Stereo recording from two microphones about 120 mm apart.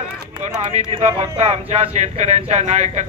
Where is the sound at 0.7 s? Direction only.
65° right (ahead or behind).